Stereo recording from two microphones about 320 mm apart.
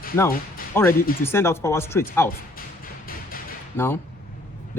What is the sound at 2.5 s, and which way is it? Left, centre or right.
Music, left.